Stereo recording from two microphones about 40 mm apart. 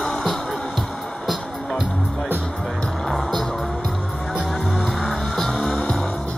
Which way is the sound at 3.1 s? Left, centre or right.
Centre.